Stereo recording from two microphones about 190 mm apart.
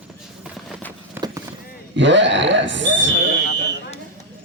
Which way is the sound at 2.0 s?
70° right (ahead or behind).